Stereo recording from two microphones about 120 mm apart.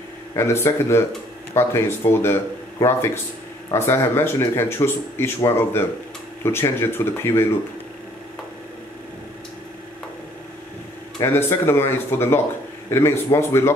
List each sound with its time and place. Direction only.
0.4 s speech: 20° left (ahead or behind)
11.1 s speech: 20° left (ahead or behind)